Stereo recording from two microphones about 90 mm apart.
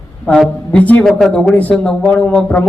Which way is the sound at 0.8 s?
15° left (ahead or behind).